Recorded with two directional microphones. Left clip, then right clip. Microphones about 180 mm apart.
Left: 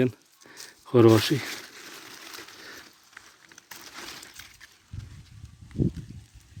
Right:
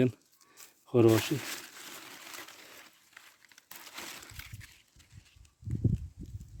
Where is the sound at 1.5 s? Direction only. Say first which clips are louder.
Left 4 dB; 50° right (ahead or behind).